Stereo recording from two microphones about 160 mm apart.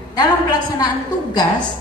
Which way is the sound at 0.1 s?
25° left (ahead or behind).